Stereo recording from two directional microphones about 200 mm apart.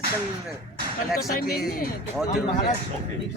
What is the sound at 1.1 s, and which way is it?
Speech, centre (ahead or behind).